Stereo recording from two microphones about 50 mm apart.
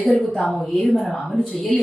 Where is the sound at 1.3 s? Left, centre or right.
Left.